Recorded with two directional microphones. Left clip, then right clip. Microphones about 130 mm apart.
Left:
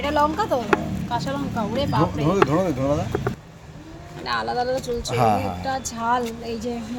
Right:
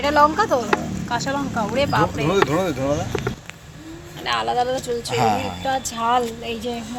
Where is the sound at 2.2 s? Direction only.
65° left (ahead or behind).